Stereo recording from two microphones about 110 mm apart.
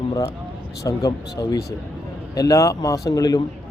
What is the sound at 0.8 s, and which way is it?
A man's voice, 30° left (ahead or behind).